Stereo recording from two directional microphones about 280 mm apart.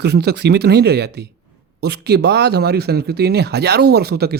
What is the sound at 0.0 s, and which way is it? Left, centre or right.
Speech, right.